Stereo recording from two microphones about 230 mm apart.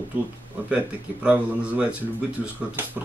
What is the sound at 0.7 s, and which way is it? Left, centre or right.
Speech, centre.